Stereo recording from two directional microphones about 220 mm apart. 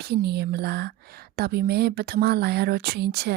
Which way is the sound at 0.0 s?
45° right (ahead or behind).